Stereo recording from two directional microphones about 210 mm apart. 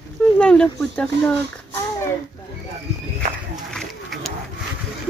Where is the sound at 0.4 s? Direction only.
5° left (ahead or behind).